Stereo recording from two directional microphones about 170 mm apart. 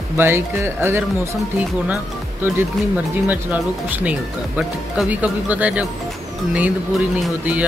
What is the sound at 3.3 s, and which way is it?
Speech, 10° right (ahead or behind).